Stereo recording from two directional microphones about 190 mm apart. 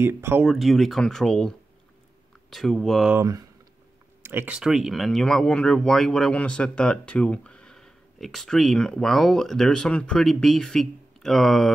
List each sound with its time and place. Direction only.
0.0 s speech: 10° right (ahead or behind)
2.5 s speech: centre (ahead or behind)
3.2 s speech: 20° right (ahead or behind); by 11.7 s centre (ahead or behind)